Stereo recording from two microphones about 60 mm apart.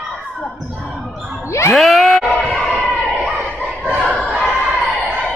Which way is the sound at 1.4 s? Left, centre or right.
Left.